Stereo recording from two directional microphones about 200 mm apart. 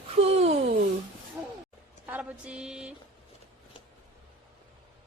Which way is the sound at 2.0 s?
5° right (ahead or behind).